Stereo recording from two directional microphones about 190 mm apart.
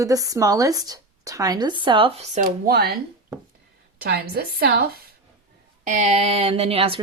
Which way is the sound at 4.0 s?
60° right (ahead or behind).